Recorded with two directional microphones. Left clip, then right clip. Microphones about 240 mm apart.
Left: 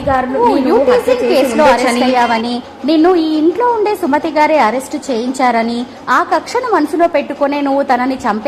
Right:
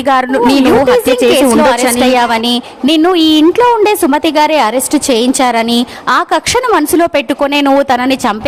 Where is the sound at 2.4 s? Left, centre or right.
Right.